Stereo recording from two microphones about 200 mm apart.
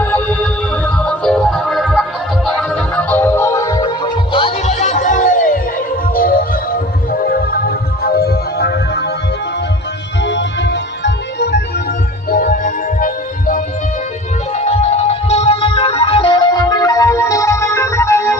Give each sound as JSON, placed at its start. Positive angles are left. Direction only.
{"t": 0.0, "sound": "music", "side_deg": 10}
{"t": 7.1, "sound": "music", "side_deg": 50}
{"t": 10.2, "sound": "music", "side_deg": 60}
{"t": 12.3, "sound": "music", "side_deg": 45}
{"t": 14.5, "sound": "music", "side_deg": 35}